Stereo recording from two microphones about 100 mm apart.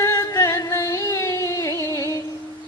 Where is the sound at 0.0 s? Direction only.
35° left (ahead or behind).